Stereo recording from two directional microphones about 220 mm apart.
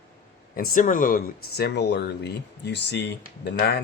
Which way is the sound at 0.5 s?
40° left (ahead or behind).